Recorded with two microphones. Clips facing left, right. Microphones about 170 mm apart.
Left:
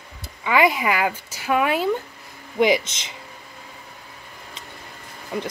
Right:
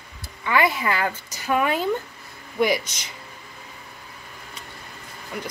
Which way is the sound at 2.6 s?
20° left (ahead or behind).